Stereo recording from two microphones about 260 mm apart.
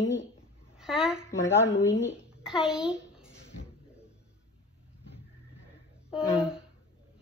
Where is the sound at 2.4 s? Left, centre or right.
Centre.